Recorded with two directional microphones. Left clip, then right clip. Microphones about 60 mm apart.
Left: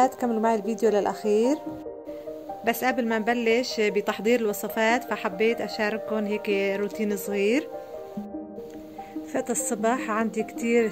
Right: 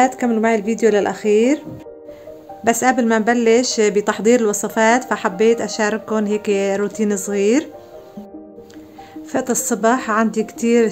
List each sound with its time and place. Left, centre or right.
0.0 s speech: left
2.8 s speech: left
7.2 s speech: left
9.3 s speech: left